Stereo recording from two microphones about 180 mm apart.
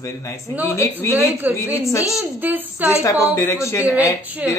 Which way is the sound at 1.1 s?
10° right (ahead or behind).